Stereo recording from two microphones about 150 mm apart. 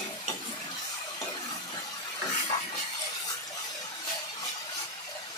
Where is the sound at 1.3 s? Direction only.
25° left (ahead or behind).